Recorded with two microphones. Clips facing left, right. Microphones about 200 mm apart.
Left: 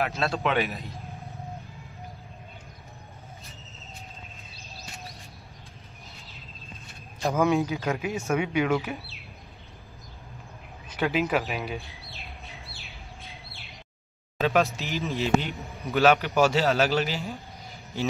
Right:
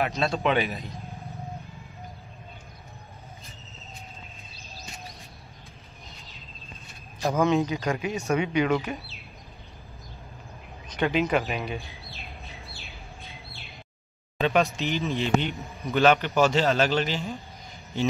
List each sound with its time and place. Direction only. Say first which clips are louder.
0.0 s a man's voice: right 2 dB; centre (ahead or behind)
7.3 s a man's voice: even; 10° left (ahead or behind)
8.8 s speech: right 1 dB; 15° right (ahead or behind)
11.0 s bird: right 1 dB; 5° left (ahead or behind)
14.4 s a man's voice: right 1 dB; centre (ahead or behind)